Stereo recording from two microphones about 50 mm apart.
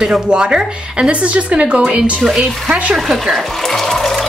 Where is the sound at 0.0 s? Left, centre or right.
Centre.